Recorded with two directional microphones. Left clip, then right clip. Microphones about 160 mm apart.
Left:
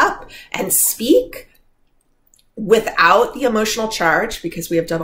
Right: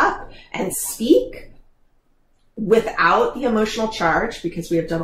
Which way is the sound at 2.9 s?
15° left (ahead or behind).